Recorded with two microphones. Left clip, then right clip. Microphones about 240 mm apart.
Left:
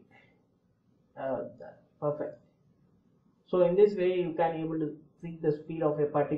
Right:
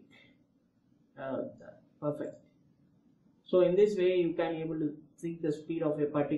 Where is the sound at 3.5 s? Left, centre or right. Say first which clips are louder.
Left 2 dB; right.